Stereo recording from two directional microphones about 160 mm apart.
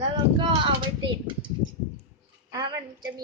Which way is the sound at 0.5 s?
30° right (ahead or behind).